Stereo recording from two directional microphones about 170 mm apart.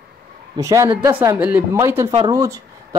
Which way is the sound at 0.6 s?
20° right (ahead or behind).